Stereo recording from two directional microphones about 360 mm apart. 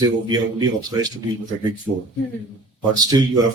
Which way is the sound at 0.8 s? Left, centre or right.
Centre.